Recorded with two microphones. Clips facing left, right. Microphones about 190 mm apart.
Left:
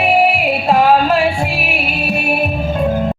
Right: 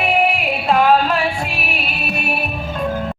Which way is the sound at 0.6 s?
35° left (ahead or behind).